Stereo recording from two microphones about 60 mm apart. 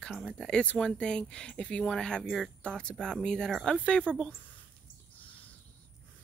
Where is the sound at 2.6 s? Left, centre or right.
Centre.